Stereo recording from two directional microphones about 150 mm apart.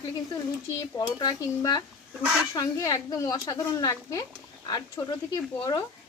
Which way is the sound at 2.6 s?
25° left (ahead or behind).